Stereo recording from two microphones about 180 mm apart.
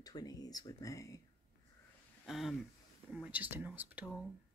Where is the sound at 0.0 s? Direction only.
20° left (ahead or behind).